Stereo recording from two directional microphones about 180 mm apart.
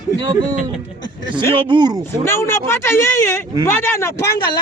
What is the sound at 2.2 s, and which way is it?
Speech, 15° left (ahead or behind).